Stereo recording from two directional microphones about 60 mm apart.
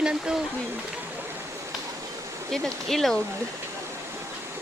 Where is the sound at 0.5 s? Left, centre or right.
Right.